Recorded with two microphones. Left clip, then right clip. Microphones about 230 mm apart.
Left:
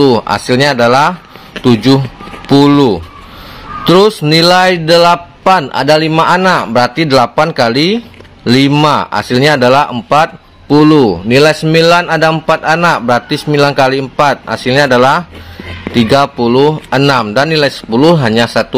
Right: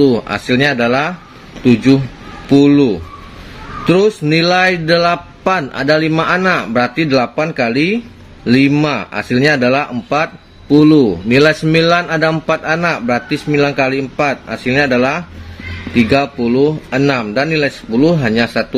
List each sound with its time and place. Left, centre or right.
0.0 s a man's voice: centre